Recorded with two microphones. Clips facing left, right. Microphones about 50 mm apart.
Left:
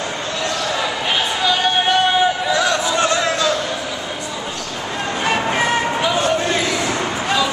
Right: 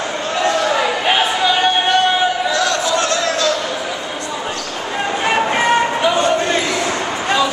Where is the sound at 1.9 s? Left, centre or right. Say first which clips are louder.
Right 1 dB; centre.